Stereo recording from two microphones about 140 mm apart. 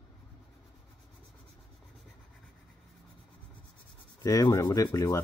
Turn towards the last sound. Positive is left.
turn(degrees=20)  # may be behind; listen again after turning